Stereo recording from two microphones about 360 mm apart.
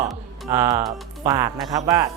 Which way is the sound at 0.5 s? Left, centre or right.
Centre.